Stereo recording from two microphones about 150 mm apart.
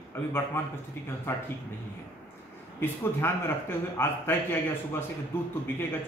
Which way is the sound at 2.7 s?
15° left (ahead or behind).